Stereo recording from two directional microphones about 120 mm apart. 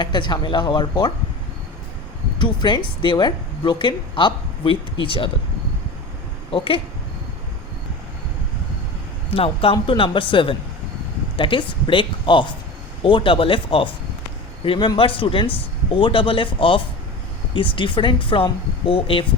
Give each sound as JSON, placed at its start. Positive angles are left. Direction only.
{"t": 0.0, "sound": "speech", "side_deg": 40}
{"t": 2.4, "sound": "speech", "side_deg": 40}
{"t": 6.5, "sound": "speech", "side_deg": 50}
{"t": 9.3, "sound": "speech", "side_deg": 50}